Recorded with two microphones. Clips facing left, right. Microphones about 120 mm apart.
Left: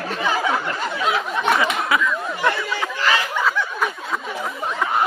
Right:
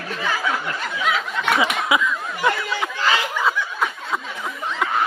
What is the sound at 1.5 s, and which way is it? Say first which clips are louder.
Speech: even; 10° right (ahead or behind).